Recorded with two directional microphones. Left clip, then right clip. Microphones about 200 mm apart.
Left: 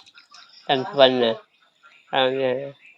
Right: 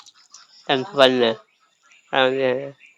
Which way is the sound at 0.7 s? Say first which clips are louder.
Right 1 dB; 25° right (ahead or behind).